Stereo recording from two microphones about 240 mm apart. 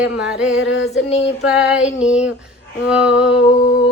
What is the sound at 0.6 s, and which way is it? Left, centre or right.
Music, left.